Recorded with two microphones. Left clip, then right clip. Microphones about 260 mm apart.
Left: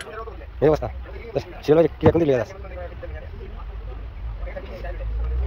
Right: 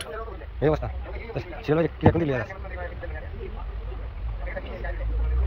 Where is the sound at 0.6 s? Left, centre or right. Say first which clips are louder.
Left 5 dB; centre.